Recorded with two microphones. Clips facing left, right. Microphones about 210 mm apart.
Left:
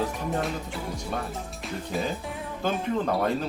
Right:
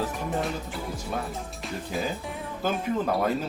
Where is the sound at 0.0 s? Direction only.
Centre (ahead or behind).